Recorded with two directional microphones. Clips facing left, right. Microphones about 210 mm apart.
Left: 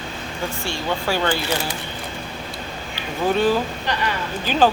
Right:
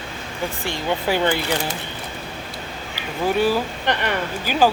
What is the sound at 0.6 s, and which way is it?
Speech, 15° right (ahead or behind).